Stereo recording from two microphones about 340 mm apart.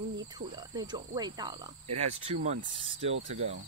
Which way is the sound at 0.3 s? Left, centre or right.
Centre.